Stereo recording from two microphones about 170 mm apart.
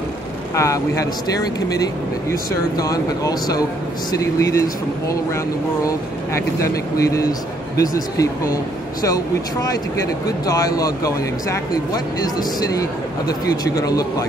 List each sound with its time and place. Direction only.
0.6 s speech: 20° left (ahead or behind)